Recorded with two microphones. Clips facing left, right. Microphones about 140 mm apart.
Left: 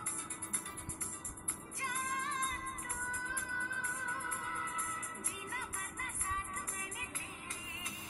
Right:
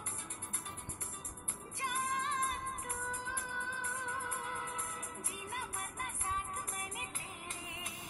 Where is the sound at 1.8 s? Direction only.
25° right (ahead or behind).